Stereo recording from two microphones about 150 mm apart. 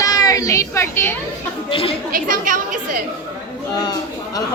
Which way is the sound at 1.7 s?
40° left (ahead or behind).